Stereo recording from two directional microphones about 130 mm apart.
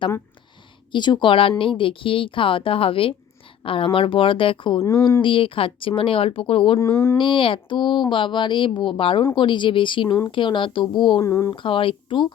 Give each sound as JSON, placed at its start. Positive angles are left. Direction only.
{"t": 0.9, "sound": "speech", "side_deg": 35}
{"t": 4.8, "sound": "speech", "side_deg": 25}
{"t": 5.2, "sound": "speech", "side_deg": 40}
{"t": 6.7, "sound": "speech", "side_deg": 20}
{"t": 7.2, "sound": "speech", "side_deg": 40}
{"t": 11.2, "sound": "speech", "side_deg": 20}
{"t": 11.5, "sound": "speech", "side_deg": 40}